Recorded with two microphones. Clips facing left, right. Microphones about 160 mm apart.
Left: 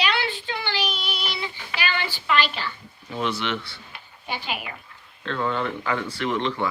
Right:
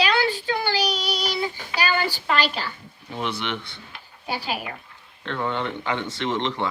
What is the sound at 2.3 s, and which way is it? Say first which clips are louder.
Speech: left 2 dB; 40° right (ahead or behind).